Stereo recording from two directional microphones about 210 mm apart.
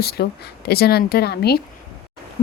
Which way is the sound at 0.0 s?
50° left (ahead or behind).